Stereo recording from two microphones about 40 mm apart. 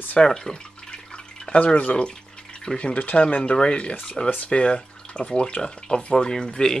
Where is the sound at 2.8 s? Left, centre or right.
Left.